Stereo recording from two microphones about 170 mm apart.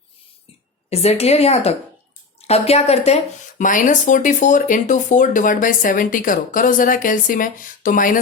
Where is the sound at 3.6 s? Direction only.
50° left (ahead or behind).